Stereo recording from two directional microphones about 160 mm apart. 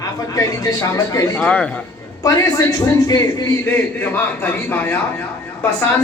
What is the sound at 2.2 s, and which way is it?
A man's voice, 20° left (ahead or behind).